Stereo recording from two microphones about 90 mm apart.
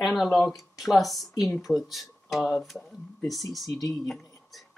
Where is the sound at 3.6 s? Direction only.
40° left (ahead or behind).